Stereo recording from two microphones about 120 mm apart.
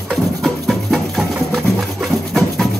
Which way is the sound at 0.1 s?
Centre (ahead or behind).